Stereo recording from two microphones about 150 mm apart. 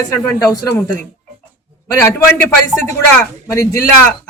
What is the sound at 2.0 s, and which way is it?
Speech, 15° left (ahead or behind).